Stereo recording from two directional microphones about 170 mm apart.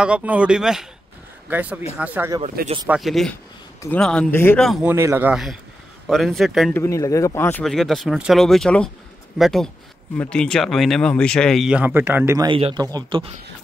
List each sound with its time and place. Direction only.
0.0 s speech: 5° right (ahead or behind)
2.6 s speech: 65° right (ahead or behind)
2.9 s speech: centre (ahead or behind)
4.8 s speech: 15° right (ahead or behind)
5.3 s speech: centre (ahead or behind)
6.7 s speech: 15° left (ahead or behind)
7.6 s speech: centre (ahead or behind)
12.4 s a man's voice: 30° right (ahead or behind)